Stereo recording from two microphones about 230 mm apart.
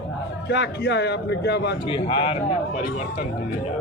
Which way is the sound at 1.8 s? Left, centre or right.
Left.